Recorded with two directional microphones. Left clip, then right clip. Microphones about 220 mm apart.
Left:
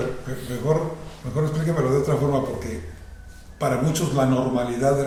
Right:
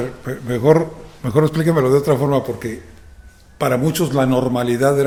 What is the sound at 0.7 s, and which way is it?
A man's voice, 50° right (ahead or behind).